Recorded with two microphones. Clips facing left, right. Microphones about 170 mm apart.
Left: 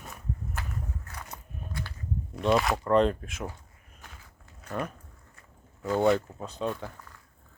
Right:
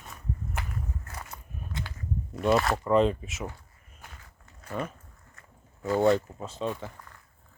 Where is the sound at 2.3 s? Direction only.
Centre (ahead or behind).